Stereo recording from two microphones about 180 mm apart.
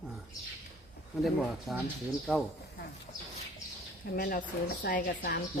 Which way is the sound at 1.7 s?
Centre (ahead or behind).